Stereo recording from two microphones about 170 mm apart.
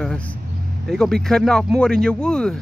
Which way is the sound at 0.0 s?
5° left (ahead or behind).